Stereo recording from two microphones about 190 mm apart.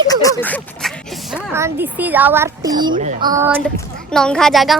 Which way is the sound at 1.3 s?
15° right (ahead or behind).